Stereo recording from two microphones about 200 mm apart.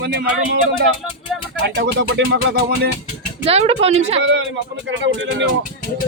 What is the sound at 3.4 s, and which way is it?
Speech, 30° right (ahead or behind).